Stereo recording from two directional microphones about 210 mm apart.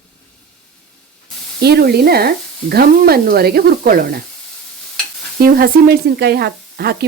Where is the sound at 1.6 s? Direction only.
50° right (ahead or behind).